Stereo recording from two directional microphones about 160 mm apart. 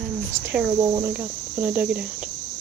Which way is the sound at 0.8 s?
20° right (ahead or behind).